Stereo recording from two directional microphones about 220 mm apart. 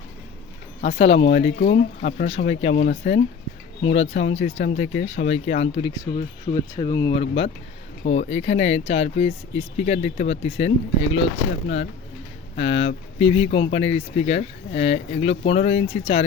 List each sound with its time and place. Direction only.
0.8 s speech: 30° left (ahead or behind)
12.5 s speech: 30° left (ahead or behind)